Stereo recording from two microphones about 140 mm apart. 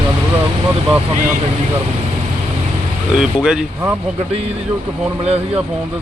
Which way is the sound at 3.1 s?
5° right (ahead or behind).